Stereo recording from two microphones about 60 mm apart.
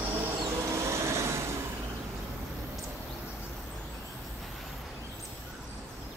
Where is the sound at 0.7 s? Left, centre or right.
Right.